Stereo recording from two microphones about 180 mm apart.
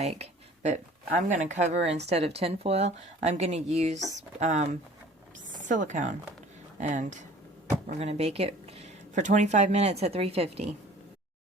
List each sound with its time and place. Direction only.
0.0 s speech: 35° right (ahead or behind)